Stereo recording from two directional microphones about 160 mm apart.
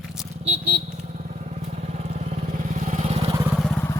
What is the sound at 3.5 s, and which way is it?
Vehicle, centre (ahead or behind).